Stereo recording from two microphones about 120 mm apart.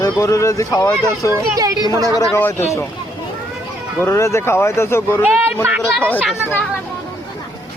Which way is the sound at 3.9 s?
20° left (ahead or behind).